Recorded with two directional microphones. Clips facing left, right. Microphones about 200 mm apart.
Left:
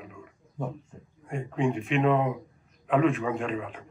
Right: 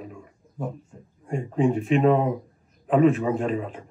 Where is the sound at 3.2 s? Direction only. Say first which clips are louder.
Right 5 dB; 35° right (ahead or behind).